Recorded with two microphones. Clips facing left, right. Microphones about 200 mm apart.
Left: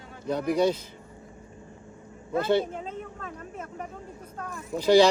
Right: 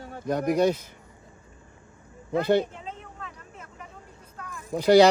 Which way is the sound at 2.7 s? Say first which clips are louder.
Left 4 dB; 50° left (ahead or behind).